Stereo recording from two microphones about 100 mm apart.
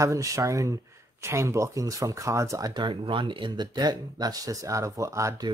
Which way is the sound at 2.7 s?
50° right (ahead or behind).